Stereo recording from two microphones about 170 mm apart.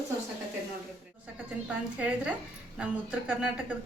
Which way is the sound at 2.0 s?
5° right (ahead or behind).